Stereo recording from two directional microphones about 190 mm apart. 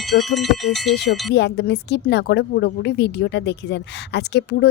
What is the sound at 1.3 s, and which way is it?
A woman's voice, 60° left (ahead or behind).